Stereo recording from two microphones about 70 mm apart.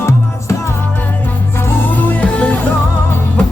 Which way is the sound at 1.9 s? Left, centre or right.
Left.